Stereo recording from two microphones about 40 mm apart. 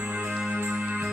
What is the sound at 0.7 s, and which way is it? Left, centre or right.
Music, right.